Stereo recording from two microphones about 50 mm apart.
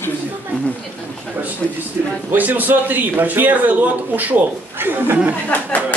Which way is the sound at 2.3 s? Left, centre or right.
Right.